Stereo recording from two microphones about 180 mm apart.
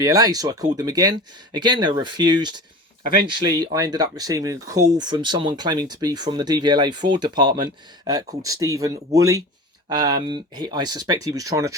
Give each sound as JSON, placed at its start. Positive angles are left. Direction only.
{"t": 0.0, "sound": "speech", "side_deg": -20}